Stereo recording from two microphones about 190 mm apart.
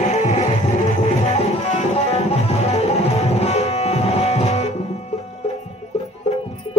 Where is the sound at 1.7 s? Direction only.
30° left (ahead or behind).